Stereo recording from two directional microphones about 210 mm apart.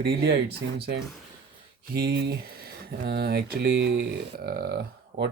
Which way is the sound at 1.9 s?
50° right (ahead or behind).